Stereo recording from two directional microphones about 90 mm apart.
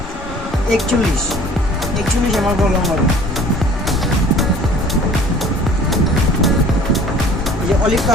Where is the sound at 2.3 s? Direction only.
Centre (ahead or behind).